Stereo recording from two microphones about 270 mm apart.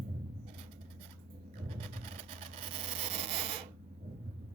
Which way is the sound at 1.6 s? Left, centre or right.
Right.